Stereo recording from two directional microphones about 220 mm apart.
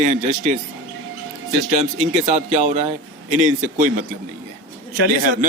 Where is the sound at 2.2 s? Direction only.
30° right (ahead or behind).